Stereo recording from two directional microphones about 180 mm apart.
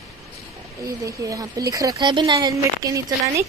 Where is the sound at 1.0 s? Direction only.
20° right (ahead or behind).